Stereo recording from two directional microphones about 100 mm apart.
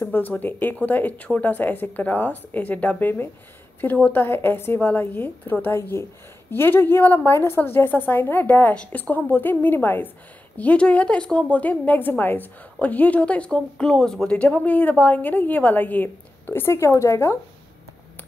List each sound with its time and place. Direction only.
0.0 s a woman's voice: 20° left (ahead or behind)